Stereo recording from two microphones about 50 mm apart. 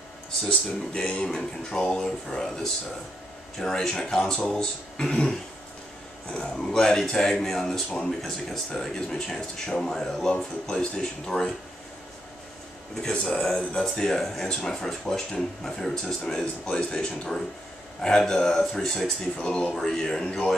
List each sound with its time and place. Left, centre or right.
0.5 s speech: left
6.3 s speech: centre
12.9 s speech: centre